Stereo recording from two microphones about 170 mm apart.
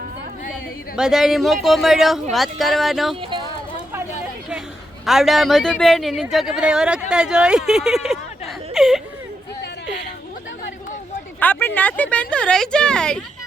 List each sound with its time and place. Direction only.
0.9 s speech: 5° right (ahead or behind)
3.2 s speech: 30° right (ahead or behind)
5.0 s speech: centre (ahead or behind)
8.7 s whimper: centre (ahead or behind)
11.3 s speech: 10° left (ahead or behind)